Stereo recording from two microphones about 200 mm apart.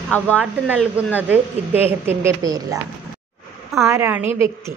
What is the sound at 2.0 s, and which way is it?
Speech, 15° right (ahead or behind).